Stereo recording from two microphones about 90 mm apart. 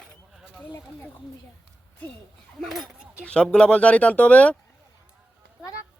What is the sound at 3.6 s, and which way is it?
Speech, 15° left (ahead or behind).